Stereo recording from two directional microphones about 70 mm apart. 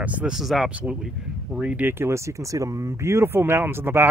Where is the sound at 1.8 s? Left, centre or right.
Right.